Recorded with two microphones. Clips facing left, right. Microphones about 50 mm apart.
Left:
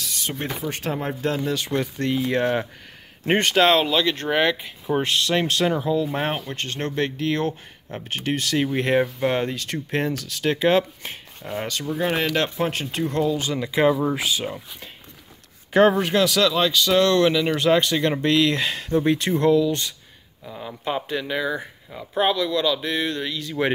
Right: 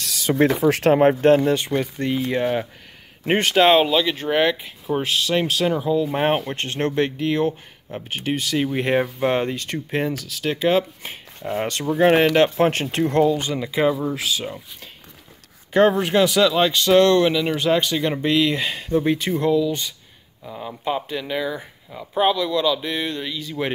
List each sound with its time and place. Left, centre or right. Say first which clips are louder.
0.0 s speech: right 10 dB; right
0.9 s speech: right 11 dB; right
1.7 s speech: right 1 dB; centre
2.2 s speech: even; centre
6.1 s speech: right 5 dB; right
7.2 s speech: right 3 dB; centre
9.9 s speech: right 1 dB; centre
11.6 s speech: right 8 dB; right
13.3 s speech: right 2 dB; centre
17.3 s speech: left 1 dB; centre